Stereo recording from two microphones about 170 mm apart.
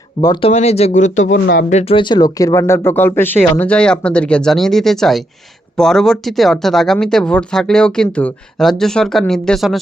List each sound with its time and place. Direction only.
0.2 s speech: 25° left (ahead or behind)
0.5 s speech: 40° left (ahead or behind); by 9.8 s centre (ahead or behind)